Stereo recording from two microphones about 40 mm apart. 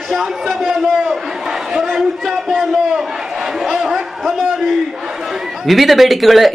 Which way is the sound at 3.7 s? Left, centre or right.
Centre.